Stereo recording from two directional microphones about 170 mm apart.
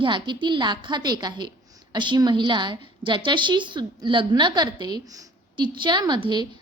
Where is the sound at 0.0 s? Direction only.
30° right (ahead or behind).